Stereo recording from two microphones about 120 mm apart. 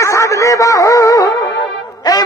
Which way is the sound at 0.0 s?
25° left (ahead or behind).